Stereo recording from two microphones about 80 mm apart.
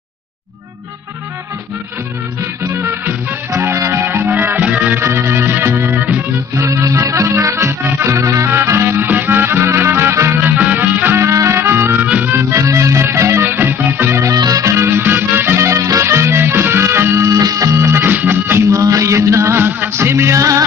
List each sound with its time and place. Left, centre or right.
2.6 s music: right
5.0 s music: right
6.5 s music: right
10.5 s music: right
12.6 s music: right
14.3 s music: right
17.3 s music: right
18.7 s music: right